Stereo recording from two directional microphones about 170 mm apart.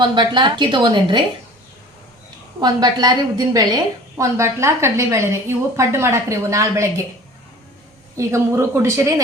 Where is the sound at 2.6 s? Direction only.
25° right (ahead or behind).